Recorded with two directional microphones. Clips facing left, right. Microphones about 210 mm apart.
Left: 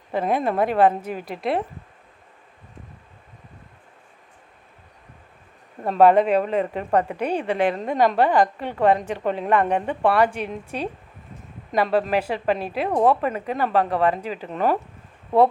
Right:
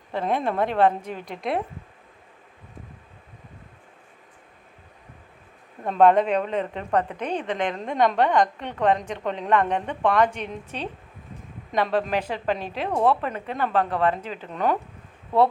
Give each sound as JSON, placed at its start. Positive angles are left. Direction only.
{"t": 0.1, "sound": "a woman's voice", "side_deg": 10}
{"t": 5.8, "sound": "a woman's voice", "side_deg": 5}